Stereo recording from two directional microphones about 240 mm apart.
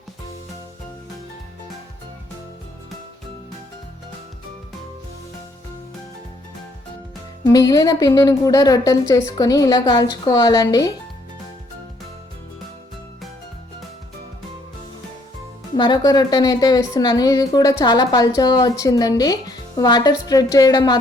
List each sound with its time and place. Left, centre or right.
7.4 s a woman's voice: centre
15.7 s a woman's voice: centre